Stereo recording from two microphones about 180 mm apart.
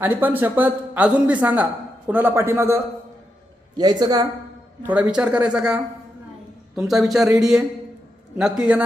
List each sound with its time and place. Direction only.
0.0 s a woman's voice: 10° right (ahead or behind)
4.8 s a man's voice: 10° right (ahead or behind)